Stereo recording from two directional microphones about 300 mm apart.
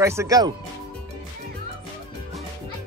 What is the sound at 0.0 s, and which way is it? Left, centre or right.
Speech, centre.